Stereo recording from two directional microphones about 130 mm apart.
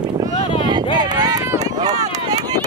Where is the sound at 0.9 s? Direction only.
35° right (ahead or behind).